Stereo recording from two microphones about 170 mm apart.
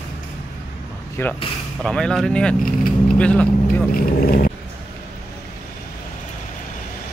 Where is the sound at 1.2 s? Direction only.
15° left (ahead or behind).